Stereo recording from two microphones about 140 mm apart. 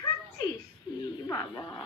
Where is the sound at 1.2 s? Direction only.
25° left (ahead or behind).